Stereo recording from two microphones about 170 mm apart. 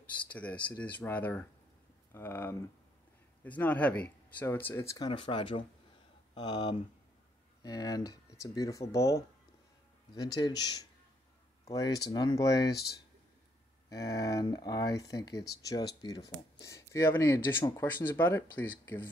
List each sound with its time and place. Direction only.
0.3 s speech: 10° left (ahead or behind)
13.8 s speech: 20° left (ahead or behind)